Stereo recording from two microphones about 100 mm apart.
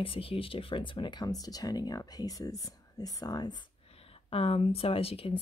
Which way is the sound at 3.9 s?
75° left (ahead or behind).